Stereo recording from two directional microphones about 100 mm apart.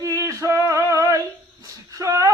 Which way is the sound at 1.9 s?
35° right (ahead or behind).